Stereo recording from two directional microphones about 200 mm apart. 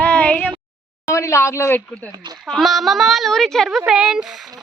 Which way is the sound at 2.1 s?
20° right (ahead or behind).